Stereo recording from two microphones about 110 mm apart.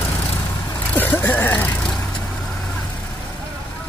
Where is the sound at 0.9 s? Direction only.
20° left (ahead or behind).